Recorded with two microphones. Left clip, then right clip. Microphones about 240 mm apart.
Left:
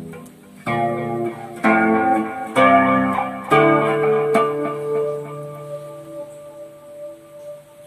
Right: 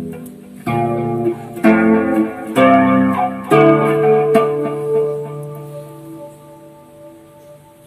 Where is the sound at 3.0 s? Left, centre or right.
Centre.